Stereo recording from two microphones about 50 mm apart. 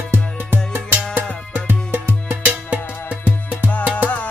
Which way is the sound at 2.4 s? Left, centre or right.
Right.